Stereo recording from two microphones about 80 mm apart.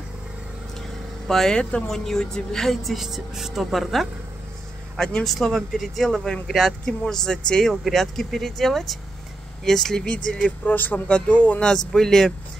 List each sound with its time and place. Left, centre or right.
1.2 s speech: centre